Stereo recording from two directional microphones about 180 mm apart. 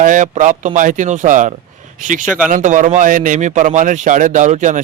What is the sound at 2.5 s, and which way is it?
A man's voice, 45° right (ahead or behind).